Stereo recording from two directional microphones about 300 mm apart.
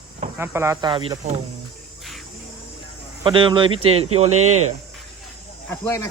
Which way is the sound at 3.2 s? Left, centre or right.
Centre.